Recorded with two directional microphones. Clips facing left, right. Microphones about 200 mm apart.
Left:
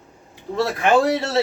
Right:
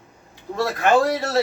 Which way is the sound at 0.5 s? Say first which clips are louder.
Left 1 dB; 25° left (ahead or behind).